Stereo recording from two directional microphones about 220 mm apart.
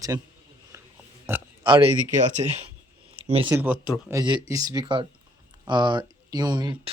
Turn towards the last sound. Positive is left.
turn(degrees=-20)  # may be behind; listen again after turning